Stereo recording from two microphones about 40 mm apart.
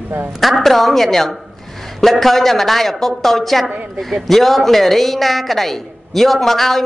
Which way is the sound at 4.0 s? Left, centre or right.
Centre.